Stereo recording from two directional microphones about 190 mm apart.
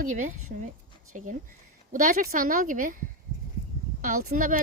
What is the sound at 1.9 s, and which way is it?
A woman's voice, 45° right (ahead or behind).